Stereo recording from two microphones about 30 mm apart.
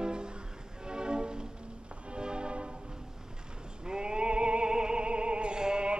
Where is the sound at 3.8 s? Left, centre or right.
Right.